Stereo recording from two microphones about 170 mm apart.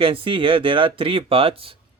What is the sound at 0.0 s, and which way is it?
Speech, 30° right (ahead or behind).